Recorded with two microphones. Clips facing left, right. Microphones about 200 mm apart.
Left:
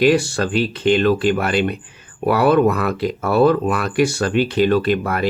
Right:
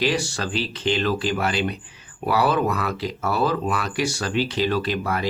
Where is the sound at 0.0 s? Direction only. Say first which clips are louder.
Left 8 dB; 55° left (ahead or behind).